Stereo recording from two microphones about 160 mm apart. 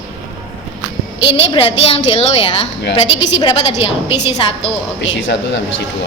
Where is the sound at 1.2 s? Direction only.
35° left (ahead or behind).